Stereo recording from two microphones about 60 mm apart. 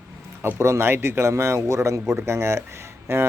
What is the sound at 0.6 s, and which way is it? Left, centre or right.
A man's voice, right.